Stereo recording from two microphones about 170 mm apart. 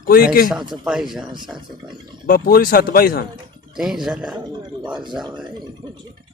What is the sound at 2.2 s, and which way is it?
Speech, 60° left (ahead or behind).